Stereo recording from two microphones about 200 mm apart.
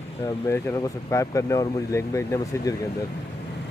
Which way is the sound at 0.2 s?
15° left (ahead or behind).